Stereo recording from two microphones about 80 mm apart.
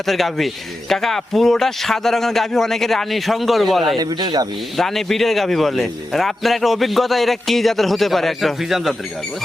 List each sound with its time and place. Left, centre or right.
0.0 s a man's voice: centre
3.9 s speech: right
4.8 s a man's voice: centre